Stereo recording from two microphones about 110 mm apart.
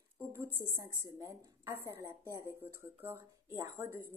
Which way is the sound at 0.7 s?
30° right (ahead or behind).